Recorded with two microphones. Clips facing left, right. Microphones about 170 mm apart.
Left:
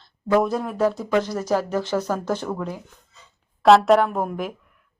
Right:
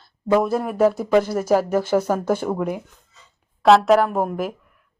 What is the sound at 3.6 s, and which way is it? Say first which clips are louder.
Speech: even; centre (ahead or behind).